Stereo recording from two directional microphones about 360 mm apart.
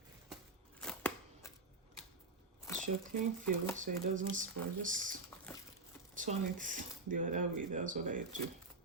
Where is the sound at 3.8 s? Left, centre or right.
Right.